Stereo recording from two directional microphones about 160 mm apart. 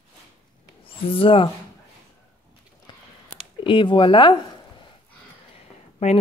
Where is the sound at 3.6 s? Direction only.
30° left (ahead or behind).